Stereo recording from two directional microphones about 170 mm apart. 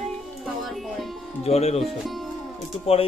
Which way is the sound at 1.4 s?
40° left (ahead or behind).